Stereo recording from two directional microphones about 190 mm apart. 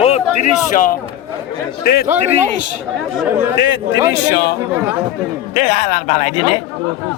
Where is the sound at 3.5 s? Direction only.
70° left (ahead or behind).